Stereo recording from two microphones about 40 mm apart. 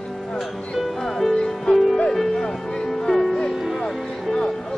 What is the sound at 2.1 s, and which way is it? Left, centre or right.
Music, centre.